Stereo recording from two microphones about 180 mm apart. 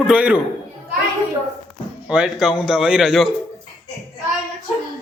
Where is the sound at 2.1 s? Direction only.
5° right (ahead or behind).